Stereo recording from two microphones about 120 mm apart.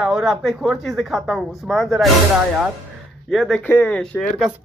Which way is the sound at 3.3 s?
Centre (ahead or behind).